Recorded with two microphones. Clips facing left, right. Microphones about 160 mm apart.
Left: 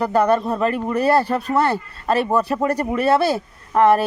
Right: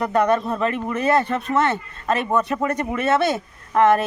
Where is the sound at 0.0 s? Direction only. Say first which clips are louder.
Left 2 dB; 30° left (ahead or behind).